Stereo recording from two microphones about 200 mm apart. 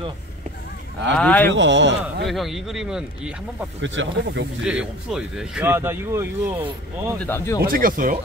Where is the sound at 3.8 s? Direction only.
70° right (ahead or behind).